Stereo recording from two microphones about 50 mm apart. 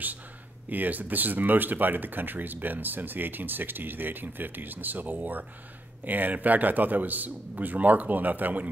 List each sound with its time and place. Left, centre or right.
0.7 s speech: right